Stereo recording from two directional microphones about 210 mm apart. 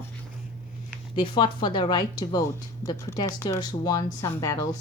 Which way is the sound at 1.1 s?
25° left (ahead or behind).